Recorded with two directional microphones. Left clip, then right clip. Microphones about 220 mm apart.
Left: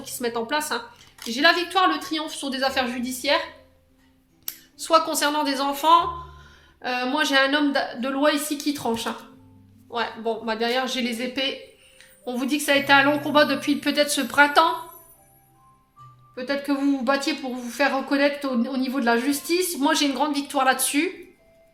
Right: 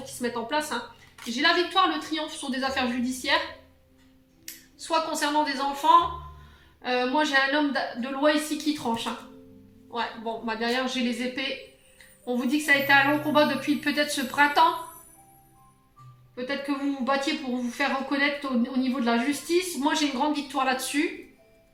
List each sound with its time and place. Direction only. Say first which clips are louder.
0.0 s speech: left 4 dB; 50° left (ahead or behind)
4.4 s speech: left 6 dB; 50° left (ahead or behind)
16.3 s speech: left 4 dB; 50° left (ahead or behind)